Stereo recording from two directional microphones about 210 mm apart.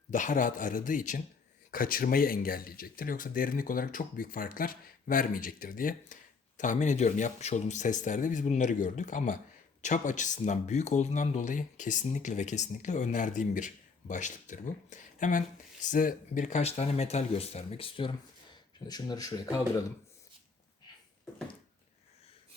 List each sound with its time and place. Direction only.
0.1 s speech: 35° left (ahead or behind); by 19.8 s 15° left (ahead or behind)